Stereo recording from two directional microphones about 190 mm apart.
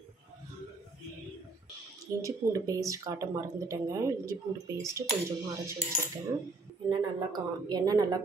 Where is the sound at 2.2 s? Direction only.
15° right (ahead or behind).